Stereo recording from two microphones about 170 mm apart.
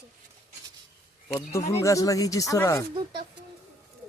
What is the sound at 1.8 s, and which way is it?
Speech, 20° left (ahead or behind).